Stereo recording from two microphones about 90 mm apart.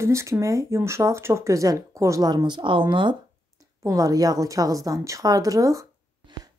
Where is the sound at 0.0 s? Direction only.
30° right (ahead or behind).